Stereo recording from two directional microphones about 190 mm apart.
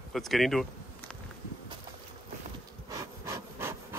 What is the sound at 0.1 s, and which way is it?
Speech, centre (ahead or behind).